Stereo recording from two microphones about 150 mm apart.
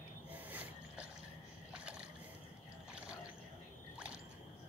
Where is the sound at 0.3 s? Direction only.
10° right (ahead or behind).